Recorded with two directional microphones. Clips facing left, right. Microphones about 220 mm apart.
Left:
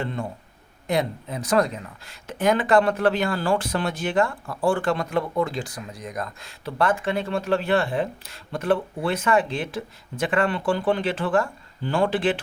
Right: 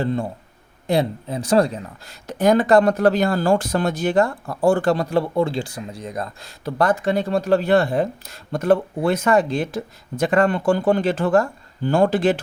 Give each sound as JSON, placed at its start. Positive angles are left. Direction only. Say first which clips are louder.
{"t": 0.0, "sound": "speech", "louder": "right 6 dB", "side_deg": -35}